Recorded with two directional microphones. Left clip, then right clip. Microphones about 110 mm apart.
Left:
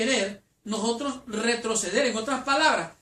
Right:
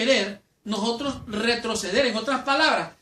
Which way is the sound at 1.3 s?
20° right (ahead or behind).